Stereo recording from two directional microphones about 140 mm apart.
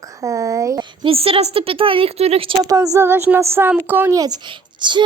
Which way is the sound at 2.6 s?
25° right (ahead or behind).